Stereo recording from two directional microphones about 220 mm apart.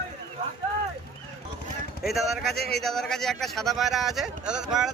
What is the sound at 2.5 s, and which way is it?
Speech, 45° left (ahead or behind).